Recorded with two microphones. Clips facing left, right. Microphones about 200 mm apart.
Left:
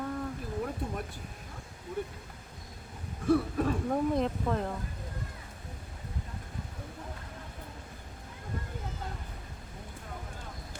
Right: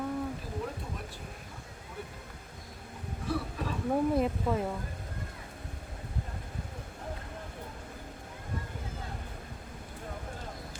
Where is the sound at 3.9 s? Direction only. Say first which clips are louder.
Right 1 dB; 5° right (ahead or behind).